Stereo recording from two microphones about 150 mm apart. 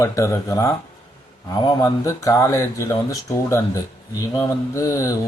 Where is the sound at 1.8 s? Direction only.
20° left (ahead or behind).